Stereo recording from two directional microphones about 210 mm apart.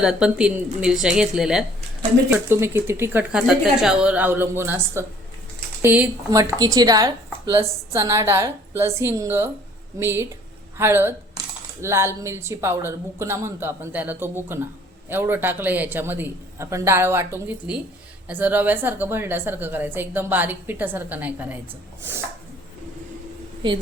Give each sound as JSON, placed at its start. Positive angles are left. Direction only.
{"t": 0.0, "sound": "a woman's voice", "side_deg": -5}